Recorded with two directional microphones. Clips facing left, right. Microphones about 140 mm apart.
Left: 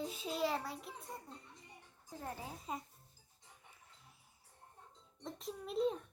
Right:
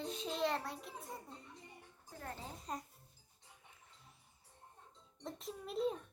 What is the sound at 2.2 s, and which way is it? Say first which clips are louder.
Speech: left 2 dB; 15° left (ahead or behind).